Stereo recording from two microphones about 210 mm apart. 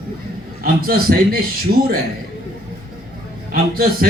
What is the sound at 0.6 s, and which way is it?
A man's voice, 45° right (ahead or behind).